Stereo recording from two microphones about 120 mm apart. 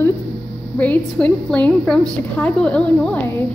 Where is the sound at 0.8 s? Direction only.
10° left (ahead or behind).